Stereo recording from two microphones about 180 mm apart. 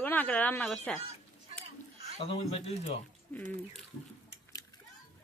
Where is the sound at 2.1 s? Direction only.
30° left (ahead or behind).